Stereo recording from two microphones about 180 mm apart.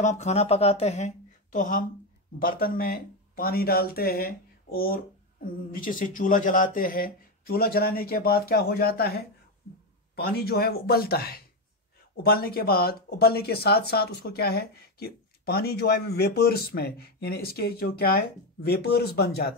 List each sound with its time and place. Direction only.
0.0 s speech: 40° left (ahead or behind); by 19.5 s 60° left (ahead or behind)